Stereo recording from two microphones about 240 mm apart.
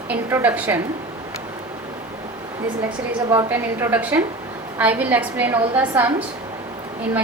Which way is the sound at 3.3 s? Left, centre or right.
Centre.